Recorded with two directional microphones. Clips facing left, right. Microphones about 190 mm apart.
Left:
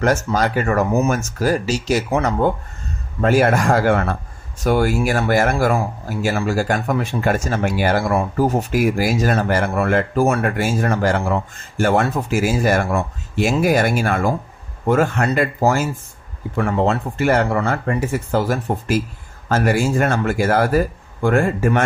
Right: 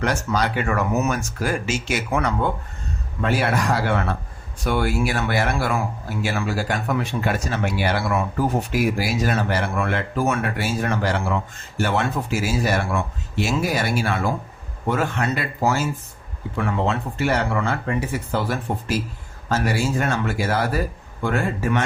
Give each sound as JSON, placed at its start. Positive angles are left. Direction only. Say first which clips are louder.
{"t": 0.0, "sound": "speech", "louder": "left 5 dB", "side_deg": 45}
{"t": 3.2, "sound": "speech", "louder": "left 6 dB", "side_deg": 45}